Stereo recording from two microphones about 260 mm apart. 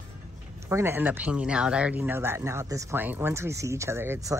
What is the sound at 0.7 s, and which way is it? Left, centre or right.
Speech, centre.